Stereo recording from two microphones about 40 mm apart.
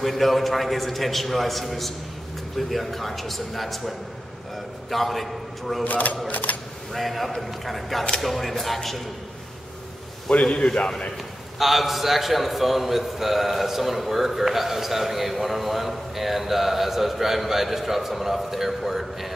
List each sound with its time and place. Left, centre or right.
0.0 s a man's voice: centre
5.9 s speech: left
6.9 s a man's voice: centre
10.3 s a man's voice: left
11.5 s a man's voice: centre